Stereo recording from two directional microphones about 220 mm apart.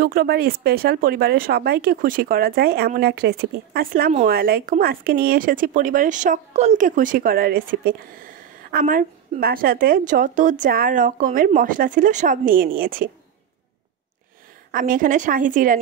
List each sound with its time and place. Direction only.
0.0 s speech: 45° right (ahead or behind)
14.7 s speech: 40° right (ahead or behind)